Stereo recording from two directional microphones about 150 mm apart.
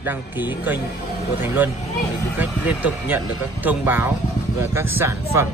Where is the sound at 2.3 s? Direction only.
10° right (ahead or behind).